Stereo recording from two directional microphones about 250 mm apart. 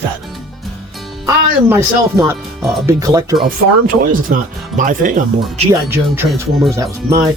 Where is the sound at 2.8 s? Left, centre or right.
Centre.